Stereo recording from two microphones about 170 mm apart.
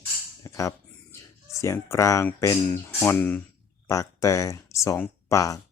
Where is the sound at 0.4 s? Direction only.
20° left (ahead or behind).